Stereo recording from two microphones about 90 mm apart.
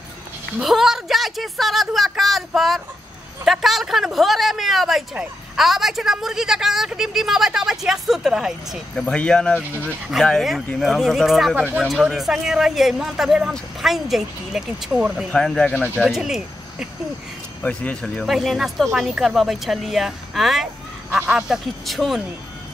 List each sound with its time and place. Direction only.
0.6 s speech: 5° right (ahead or behind)
9.0 s speech: 15° left (ahead or behind)
9.6 s speech: 15° right (ahead or behind)
10.1 s speech: 5° right (ahead or behind)
11.5 s speech: 20° right (ahead or behind)
11.8 s speech: centre (ahead or behind)
15.3 s speech: 10° left (ahead or behind)
16.0 s speech: 5° right (ahead or behind)
17.6 s speech: 15° left (ahead or behind)
18.2 s speech: centre (ahead or behind)